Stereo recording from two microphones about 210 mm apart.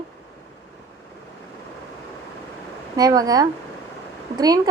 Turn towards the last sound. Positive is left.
turn(degrees=-20)  # may be behind; listen again after turning